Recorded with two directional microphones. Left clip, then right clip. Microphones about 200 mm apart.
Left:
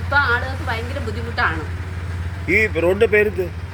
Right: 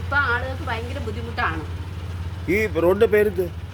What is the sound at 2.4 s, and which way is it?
Speech, 20° right (ahead or behind).